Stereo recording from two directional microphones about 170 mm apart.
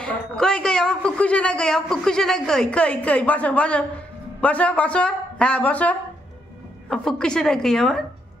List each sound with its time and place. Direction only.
0.0 s a woman's voice: 5° left (ahead or behind)